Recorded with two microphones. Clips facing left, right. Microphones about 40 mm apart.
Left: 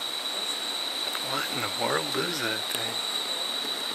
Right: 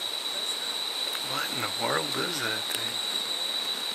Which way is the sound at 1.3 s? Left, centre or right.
Centre.